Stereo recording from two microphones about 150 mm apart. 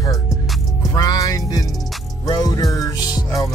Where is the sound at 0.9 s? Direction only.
25° left (ahead or behind).